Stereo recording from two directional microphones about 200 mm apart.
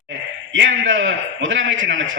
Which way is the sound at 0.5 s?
70° right (ahead or behind).